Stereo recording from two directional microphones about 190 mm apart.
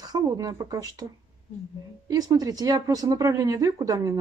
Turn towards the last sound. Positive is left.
turn(degrees=-20)  # may be behind; listen again after turning